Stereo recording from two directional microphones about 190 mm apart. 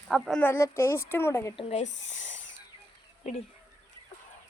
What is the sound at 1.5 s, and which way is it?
Speech, 35° left (ahead or behind).